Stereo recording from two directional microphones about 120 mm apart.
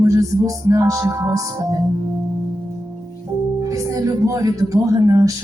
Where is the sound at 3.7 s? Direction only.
30° right (ahead or behind).